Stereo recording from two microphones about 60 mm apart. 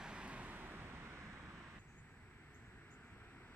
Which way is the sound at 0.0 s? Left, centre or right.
Centre.